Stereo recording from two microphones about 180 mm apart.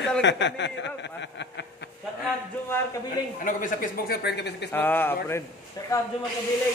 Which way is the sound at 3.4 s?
50° left (ahead or behind).